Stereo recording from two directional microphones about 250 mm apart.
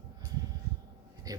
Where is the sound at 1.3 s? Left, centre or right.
Centre.